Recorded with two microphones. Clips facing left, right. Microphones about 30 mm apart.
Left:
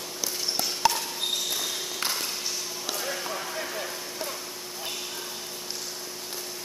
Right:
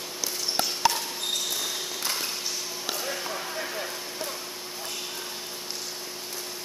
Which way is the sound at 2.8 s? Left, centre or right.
Centre.